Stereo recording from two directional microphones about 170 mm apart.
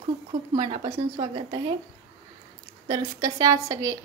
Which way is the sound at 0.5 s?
30° right (ahead or behind).